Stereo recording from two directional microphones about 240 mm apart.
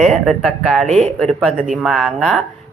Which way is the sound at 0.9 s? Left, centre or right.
Right.